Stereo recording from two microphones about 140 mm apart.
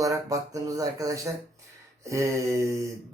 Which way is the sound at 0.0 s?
25° right (ahead or behind).